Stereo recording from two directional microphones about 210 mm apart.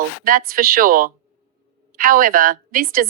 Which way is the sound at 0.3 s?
40° right (ahead or behind).